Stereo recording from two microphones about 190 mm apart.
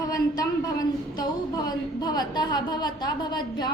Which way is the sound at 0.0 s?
20° left (ahead or behind).